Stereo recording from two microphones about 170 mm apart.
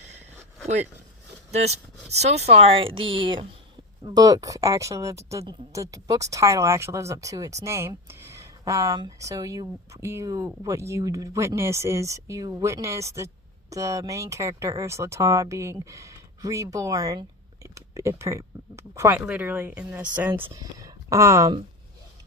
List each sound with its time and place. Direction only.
1.5 s a woman's voice: 40° right (ahead or behind); by 20.4 s 10° right (ahead or behind)
20.5 s speech: 20° right (ahead or behind)